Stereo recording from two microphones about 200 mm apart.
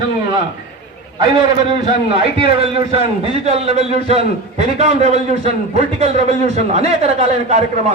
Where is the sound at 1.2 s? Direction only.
25° right (ahead or behind).